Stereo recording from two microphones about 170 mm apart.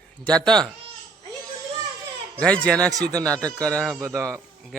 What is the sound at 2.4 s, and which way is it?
Speech, 5° left (ahead or behind).